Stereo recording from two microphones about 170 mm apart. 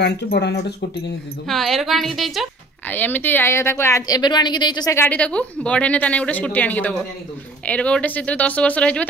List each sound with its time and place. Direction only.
0.0 s speech: 80° left
1.5 s a woman's voice: centre (ahead or behind)
2.9 s a woman's voice: 10° left (ahead or behind)